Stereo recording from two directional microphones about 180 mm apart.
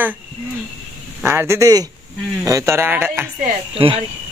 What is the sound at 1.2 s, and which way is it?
A man's voice, 15° right (ahead or behind).